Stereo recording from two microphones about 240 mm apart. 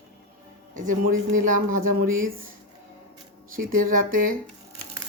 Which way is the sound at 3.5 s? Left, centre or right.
Right.